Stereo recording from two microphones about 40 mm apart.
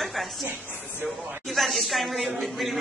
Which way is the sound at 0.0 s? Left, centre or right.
Centre.